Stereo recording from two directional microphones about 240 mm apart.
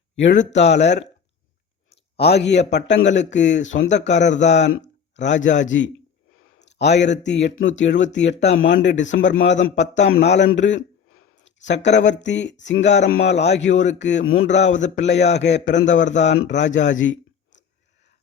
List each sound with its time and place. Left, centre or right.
0.2 s speech: left
2.1 s a man's voice: left
11.4 s a sound: left
11.9 s speech: left